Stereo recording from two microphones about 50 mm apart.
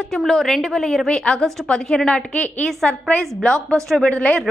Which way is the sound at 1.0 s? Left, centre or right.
Centre.